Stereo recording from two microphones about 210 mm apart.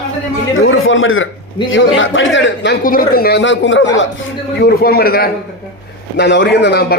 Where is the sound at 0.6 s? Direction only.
70° left (ahead or behind).